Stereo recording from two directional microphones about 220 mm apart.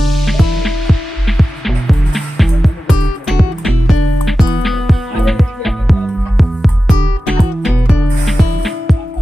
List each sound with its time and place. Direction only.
0.0 s music: centre (ahead or behind)
3.9 s music: 90° left
4.3 s music: centre (ahead or behind)